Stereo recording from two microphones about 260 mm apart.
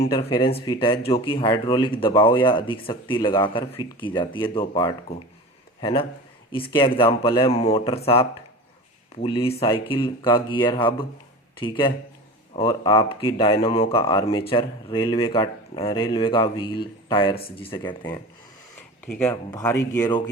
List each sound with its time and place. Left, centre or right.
0.1 s speech: centre
19.0 s speech: centre